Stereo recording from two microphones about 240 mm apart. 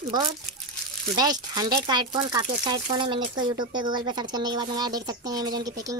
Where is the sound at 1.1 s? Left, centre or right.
Centre.